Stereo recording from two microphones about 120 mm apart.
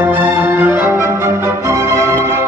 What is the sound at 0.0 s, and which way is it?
Music, 15° right (ahead or behind).